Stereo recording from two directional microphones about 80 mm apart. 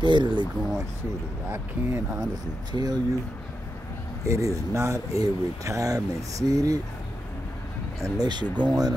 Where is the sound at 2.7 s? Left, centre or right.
Right.